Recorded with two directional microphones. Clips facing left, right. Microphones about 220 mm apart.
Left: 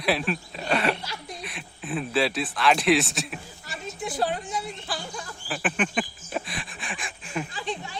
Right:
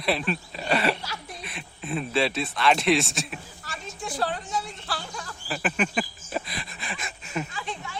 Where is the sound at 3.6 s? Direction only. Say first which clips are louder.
Left 3 dB; 20° left (ahead or behind).